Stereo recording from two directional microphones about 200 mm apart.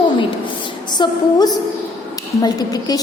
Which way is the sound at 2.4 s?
20° left (ahead or behind).